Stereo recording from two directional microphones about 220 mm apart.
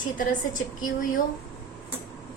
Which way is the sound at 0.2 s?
35° left (ahead or behind).